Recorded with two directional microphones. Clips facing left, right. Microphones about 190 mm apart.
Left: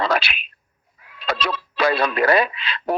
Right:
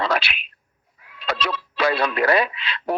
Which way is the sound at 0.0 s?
40° left (ahead or behind).